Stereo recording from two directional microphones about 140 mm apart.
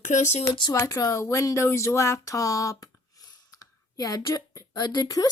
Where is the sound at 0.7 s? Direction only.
25° left (ahead or behind).